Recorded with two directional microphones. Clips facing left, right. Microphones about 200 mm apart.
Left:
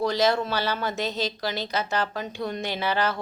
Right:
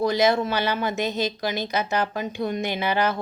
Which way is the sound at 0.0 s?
15° right (ahead or behind).